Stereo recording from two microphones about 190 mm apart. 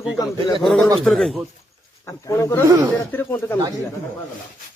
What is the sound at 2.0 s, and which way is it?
Speech, 15° left (ahead or behind).